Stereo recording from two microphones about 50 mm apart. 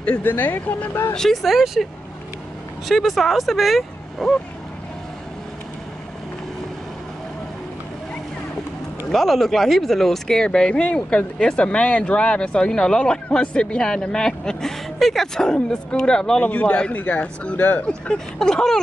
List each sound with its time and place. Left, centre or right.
0.2 s speech: left
1.1 s speech: centre
1.4 s speech: centre
2.9 s speech: centre
9.1 s speech: centre
16.4 s speech: left
17.0 s speech: left
17.8 s speech: centre